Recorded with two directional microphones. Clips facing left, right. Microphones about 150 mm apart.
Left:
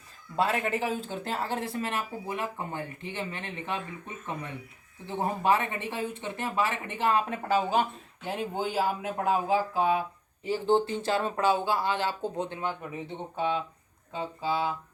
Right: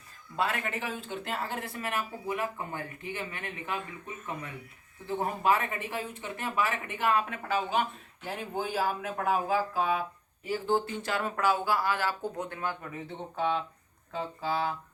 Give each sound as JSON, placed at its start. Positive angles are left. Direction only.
{"t": 0.3, "sound": "speech", "side_deg": 35}
{"t": 8.2, "sound": "speech", "side_deg": 25}